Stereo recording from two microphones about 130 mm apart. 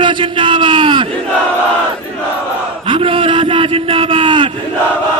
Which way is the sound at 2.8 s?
45° right (ahead or behind).